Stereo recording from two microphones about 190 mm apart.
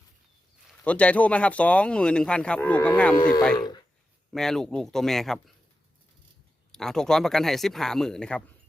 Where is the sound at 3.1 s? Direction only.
20° left (ahead or behind).